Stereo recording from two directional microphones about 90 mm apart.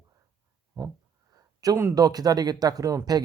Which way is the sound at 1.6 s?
45° right (ahead or behind).